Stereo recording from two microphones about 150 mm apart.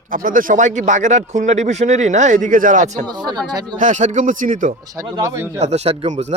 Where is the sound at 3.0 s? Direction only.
30° right (ahead or behind).